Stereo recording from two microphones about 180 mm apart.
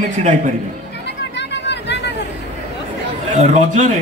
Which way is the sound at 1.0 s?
75° left (ahead or behind).